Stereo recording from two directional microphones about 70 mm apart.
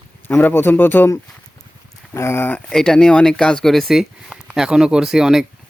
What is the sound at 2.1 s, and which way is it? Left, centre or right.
Speech, left.